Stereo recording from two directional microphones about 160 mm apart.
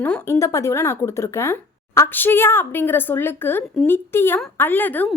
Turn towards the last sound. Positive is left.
turn(degrees=10)  # may be behind; listen again after turning